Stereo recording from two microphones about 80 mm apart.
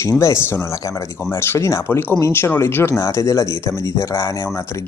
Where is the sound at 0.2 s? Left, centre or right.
Left.